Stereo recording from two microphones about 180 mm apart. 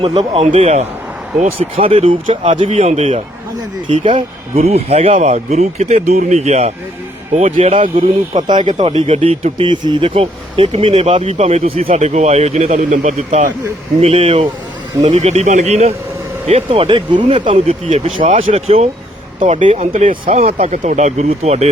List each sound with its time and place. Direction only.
0.0 s speech: 35° right (ahead or behind)